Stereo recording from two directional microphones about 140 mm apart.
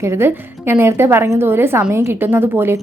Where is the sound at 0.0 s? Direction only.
20° right (ahead or behind).